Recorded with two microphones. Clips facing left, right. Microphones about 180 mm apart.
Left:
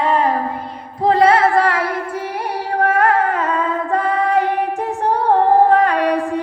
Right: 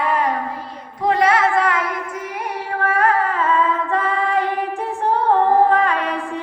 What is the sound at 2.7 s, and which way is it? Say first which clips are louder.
Female singing: left 3 dB; 45° left (ahead or behind).